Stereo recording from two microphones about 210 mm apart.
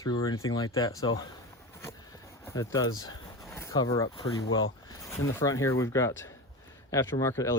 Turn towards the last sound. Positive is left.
turn(degrees=15)  # may be behind; listen again after turning